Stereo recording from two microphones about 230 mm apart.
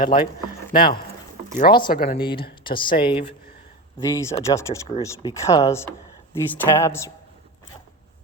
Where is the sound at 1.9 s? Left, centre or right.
Left.